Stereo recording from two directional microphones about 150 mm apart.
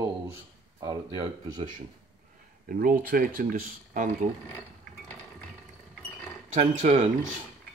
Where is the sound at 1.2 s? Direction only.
40° right (ahead or behind).